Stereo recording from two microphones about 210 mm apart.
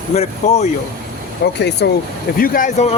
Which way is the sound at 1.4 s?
55° left (ahead or behind).